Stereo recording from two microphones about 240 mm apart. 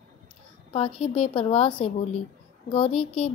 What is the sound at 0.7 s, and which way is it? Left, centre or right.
A woman's voice, left.